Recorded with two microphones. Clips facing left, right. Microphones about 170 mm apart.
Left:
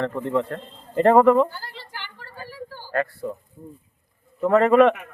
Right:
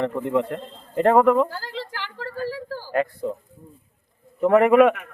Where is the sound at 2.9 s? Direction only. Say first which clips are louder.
Right 2 dB; 15° right (ahead or behind).